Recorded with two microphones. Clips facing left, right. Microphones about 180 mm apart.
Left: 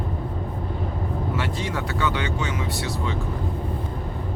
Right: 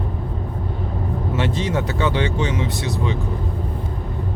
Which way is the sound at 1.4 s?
20° right (ahead or behind).